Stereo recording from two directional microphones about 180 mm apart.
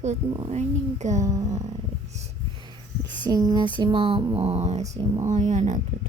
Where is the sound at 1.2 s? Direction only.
20° right (ahead or behind).